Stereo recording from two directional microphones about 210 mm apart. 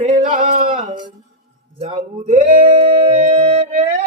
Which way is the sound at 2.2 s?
40° right (ahead or behind).